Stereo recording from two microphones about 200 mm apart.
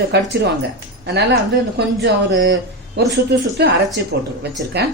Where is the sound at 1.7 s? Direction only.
65° right (ahead or behind).